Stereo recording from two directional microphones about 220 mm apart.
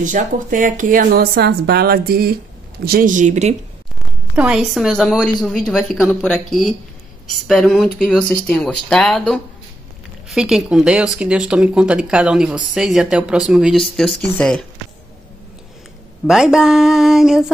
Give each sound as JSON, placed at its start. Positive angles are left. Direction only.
{"t": 0.0, "sound": "speech", "side_deg": -35}
{"t": 4.4, "sound": "speech", "side_deg": 0}
{"t": 16.3, "sound": "speech", "side_deg": 0}